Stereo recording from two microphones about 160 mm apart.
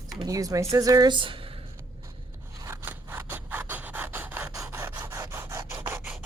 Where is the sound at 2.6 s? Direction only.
15° right (ahead or behind).